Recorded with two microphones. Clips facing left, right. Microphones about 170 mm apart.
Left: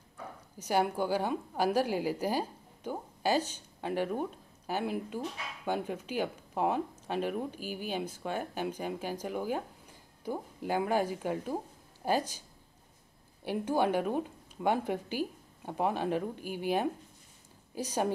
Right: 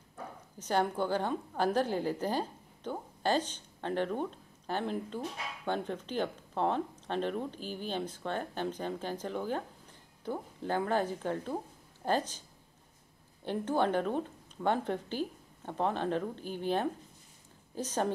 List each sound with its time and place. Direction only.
0.6 s a woman's voice: 10° left (ahead or behind)